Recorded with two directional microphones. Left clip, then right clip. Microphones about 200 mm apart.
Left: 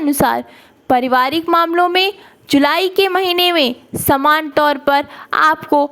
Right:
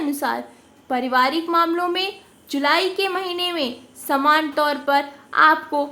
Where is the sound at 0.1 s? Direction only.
45° left (ahead or behind).